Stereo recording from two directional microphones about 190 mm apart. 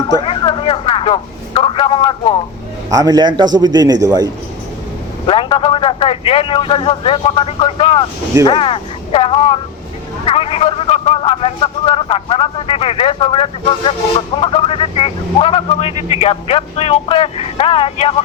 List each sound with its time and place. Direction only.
0.3 s a sound: 25° left (ahead or behind)
2.9 s a man's voice: 20° right (ahead or behind)
5.2 s a man's voice: 25° left (ahead or behind)